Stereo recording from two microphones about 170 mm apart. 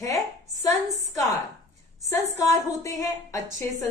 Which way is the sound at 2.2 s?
40° right (ahead or behind).